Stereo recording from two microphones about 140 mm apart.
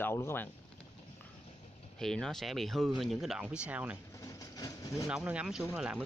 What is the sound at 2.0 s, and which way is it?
Speech, 5° left (ahead or behind).